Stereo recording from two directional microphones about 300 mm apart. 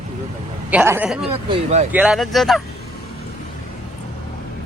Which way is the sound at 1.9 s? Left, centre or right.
Centre.